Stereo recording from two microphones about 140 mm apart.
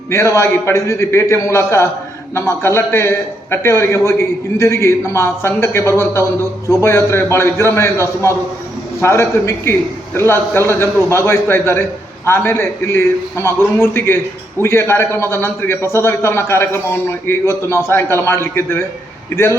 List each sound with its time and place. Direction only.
0.1 s a man's voice: 20° left (ahead or behind)